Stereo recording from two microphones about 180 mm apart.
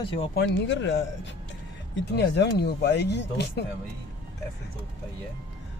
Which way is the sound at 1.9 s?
70° left (ahead or behind).